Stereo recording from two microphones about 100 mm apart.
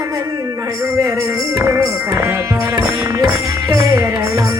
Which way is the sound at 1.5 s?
30° right (ahead or behind).